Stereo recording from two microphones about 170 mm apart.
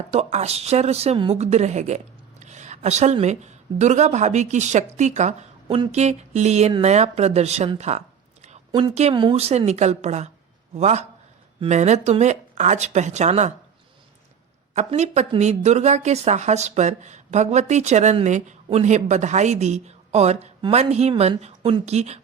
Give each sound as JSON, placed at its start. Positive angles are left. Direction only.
{"t": 0.1, "sound": "a woman's voice", "side_deg": -40}
{"t": 14.8, "sound": "speech", "side_deg": -40}